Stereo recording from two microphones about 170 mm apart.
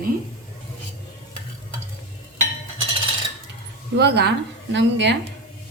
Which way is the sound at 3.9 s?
80° right.